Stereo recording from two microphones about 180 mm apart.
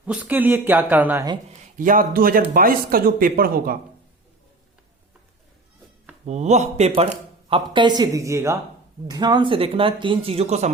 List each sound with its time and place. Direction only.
0.0 s speech: 10° right (ahead or behind)
1.6 s speech: 50° right (ahead or behind)
6.2 s speech: 40° right (ahead or behind)